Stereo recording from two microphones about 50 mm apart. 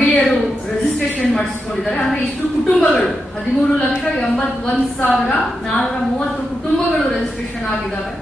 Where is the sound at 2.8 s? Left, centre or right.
Left.